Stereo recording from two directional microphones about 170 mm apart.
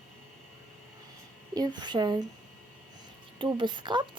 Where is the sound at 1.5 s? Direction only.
25° right (ahead or behind).